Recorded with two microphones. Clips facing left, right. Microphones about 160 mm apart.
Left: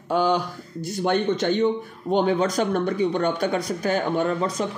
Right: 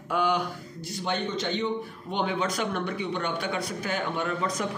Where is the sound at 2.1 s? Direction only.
40° left (ahead or behind).